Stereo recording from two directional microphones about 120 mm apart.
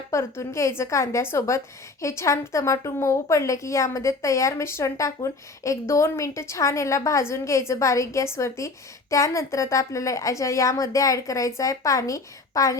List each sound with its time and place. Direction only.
0.1 s a woman's voice: 25° left (ahead or behind)